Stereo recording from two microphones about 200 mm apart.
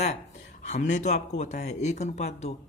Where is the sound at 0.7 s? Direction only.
35° left (ahead or behind).